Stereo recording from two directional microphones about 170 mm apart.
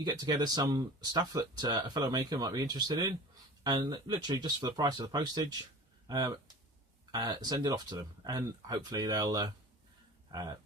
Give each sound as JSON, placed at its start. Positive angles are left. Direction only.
{"t": 0.0, "sound": "speech", "side_deg": -25}